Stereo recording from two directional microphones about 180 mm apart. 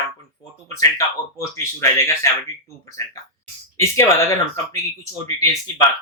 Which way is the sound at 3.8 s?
15° left (ahead or behind).